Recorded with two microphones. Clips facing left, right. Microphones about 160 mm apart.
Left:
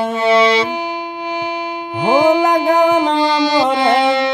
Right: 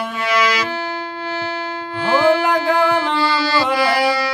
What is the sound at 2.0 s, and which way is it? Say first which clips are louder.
Music: left 3 dB; 15° left (ahead or behind).